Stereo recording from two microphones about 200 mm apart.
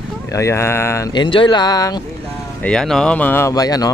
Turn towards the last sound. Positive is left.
turn(degrees=20)  # may be behind; listen again after turning